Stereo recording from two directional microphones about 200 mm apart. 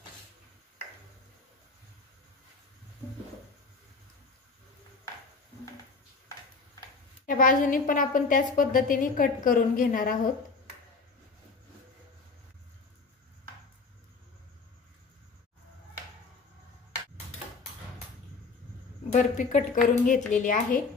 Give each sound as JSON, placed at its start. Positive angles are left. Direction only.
{"t": 7.2, "sound": "a woman's voice", "side_deg": 40}
{"t": 19.1, "sound": "a woman's voice", "side_deg": 40}